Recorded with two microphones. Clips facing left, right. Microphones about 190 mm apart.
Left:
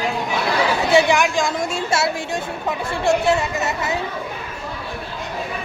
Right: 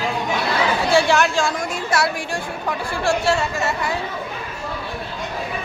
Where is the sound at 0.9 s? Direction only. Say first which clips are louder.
Left 1 dB; 20° left (ahead or behind).